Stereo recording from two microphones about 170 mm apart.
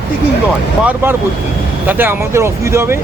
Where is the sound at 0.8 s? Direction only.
10° right (ahead or behind).